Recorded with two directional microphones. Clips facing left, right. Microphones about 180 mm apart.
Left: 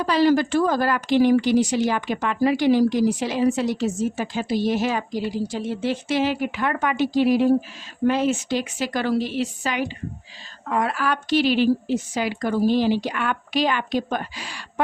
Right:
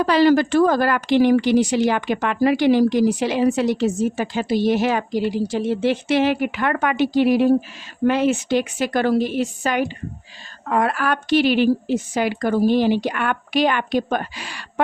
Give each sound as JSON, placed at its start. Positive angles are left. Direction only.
{"t": 0.0, "sound": "a woman's voice", "side_deg": -65}